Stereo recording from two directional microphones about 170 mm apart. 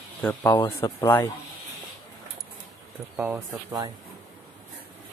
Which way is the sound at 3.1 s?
10° right (ahead or behind).